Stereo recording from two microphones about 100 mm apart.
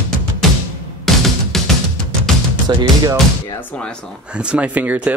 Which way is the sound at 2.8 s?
45° right (ahead or behind).